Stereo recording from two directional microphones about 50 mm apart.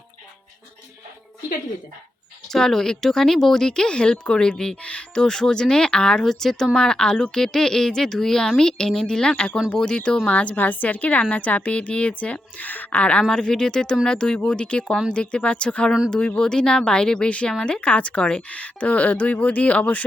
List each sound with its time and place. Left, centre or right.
2.5 s a woman's voice: centre
13.3 s a woman's voice: centre; by 20.1 s left